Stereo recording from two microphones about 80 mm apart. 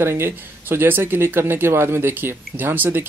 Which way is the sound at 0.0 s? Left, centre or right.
Right.